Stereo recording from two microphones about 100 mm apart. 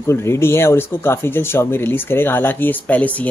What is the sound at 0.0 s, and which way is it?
Speech, 25° left (ahead or behind).